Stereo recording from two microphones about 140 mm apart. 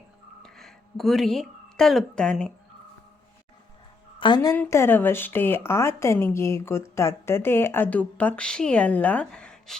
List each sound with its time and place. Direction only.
0.4 s speech: centre (ahead or behind)
4.2 s a woman's voice: 35° left (ahead or behind)
4.5 s a woman's voice: 15° left (ahead or behind)